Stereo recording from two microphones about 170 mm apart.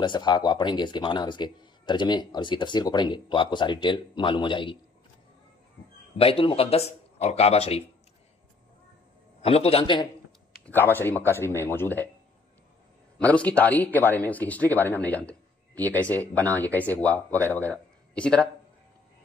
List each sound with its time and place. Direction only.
0.0 s speech: 25° left (ahead or behind)
6.1 s speech: 35° left (ahead or behind)
9.4 s speech: 35° left (ahead or behind)
10.6 s speech: 10° left (ahead or behind)
13.2 s speech: 10° left (ahead or behind)